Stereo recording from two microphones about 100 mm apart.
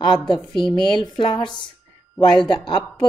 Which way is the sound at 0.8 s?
50° left (ahead or behind).